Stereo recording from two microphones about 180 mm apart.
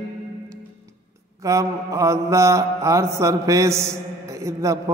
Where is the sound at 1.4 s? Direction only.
15° right (ahead or behind).